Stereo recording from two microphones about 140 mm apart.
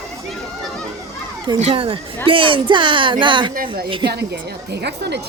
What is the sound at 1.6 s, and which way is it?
Speech, 40° right (ahead or behind).